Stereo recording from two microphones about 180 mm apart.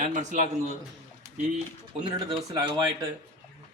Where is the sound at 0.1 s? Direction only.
45° right (ahead or behind).